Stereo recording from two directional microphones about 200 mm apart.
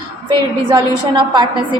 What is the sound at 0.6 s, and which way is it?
A woman's voice, 20° right (ahead or behind).